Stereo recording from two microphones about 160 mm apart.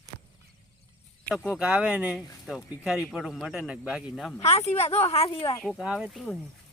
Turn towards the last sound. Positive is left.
turn(degrees=0)  # may be behind; listen again after turning